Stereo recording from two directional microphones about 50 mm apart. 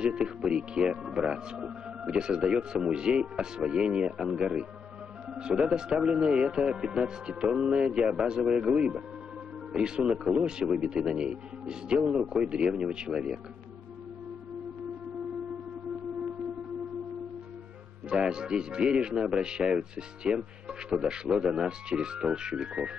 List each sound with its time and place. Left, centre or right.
0.0 s speech: centre
18.1 s speech: centre